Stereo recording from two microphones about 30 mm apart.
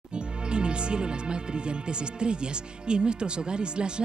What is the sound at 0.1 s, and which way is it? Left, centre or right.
Speech, right.